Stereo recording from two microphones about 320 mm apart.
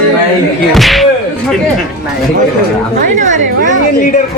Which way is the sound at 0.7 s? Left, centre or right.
Centre.